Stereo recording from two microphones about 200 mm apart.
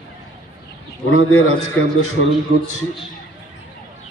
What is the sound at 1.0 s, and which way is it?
Speech, 90° left.